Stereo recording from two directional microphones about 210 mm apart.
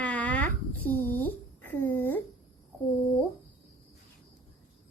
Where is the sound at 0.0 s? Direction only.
5° left (ahead or behind).